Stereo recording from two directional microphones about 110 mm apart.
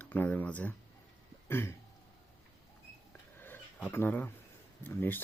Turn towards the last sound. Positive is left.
turn(degrees=20)  # may be behind; listen again after turning